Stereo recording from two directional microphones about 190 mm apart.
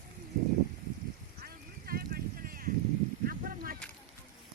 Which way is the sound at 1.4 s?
50° right (ahead or behind).